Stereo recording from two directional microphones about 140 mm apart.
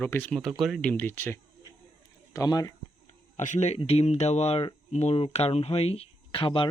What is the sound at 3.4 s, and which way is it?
Speech, 60° left (ahead or behind).